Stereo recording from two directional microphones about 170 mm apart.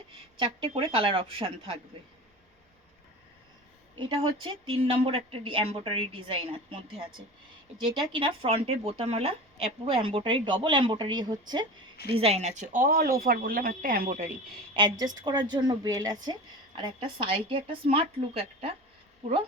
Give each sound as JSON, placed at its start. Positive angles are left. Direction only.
{"t": 0.3, "sound": "speech", "side_deg": -30}
{"t": 3.9, "sound": "speech", "side_deg": -30}
{"t": 12.1, "sound": "speech", "side_deg": -40}
{"t": 14.7, "sound": "speech", "side_deg": -25}